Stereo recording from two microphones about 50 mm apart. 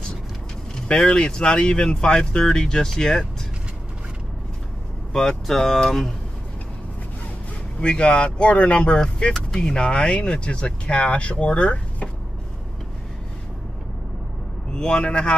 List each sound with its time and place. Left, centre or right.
0.8 s speech: centre
5.1 s speech: centre
7.8 s speech: centre
14.7 s a man's voice: centre